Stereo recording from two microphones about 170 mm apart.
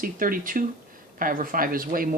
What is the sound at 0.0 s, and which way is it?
Speech, 55° right (ahead or behind).